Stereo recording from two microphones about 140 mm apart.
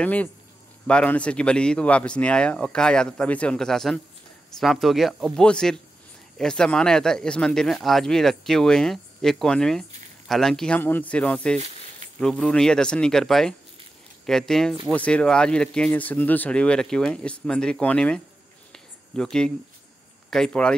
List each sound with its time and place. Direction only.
0.0 s speech: 10° left (ahead or behind)
18.7 s a sound: 5° left (ahead or behind)
20.2 s speech: 5° left (ahead or behind)